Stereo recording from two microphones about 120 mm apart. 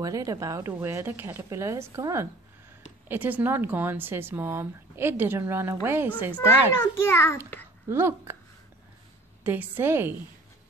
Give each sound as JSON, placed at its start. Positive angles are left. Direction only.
{"t": 0.0, "sound": "a woman's voice", "side_deg": -30}
{"t": 6.3, "sound": "a child's voice", "side_deg": 20}
{"t": 7.9, "sound": "a woman's voice", "side_deg": -20}
{"t": 9.4, "sound": "speech", "side_deg": -15}